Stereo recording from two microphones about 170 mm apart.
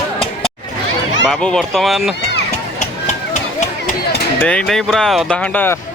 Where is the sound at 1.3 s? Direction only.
Centre (ahead or behind).